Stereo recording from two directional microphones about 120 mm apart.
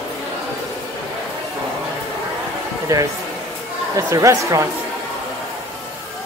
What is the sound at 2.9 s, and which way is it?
Speech, 25° right (ahead or behind).